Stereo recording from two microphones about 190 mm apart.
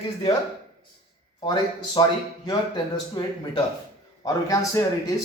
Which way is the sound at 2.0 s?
30° left (ahead or behind).